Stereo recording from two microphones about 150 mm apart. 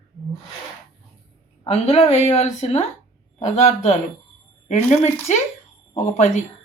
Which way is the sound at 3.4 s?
55° left (ahead or behind).